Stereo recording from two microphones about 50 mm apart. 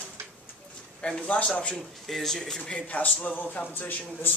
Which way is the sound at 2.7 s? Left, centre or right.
Left.